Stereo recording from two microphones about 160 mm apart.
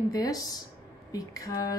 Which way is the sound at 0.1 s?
25° left (ahead or behind).